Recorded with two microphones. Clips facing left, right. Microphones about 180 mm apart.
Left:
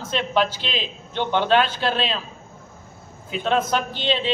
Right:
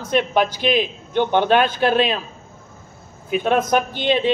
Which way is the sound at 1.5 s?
50° right (ahead or behind).